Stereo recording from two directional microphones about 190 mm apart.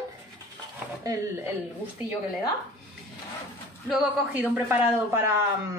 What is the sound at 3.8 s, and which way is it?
A man's voice, 5° right (ahead or behind).